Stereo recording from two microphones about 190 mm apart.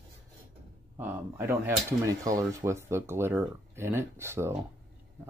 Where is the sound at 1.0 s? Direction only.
10° right (ahead or behind).